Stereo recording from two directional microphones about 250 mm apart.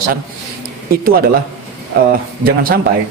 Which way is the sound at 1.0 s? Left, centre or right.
Right.